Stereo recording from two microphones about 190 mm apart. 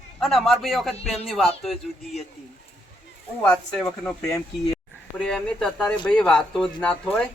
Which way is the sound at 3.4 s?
5° left (ahead or behind).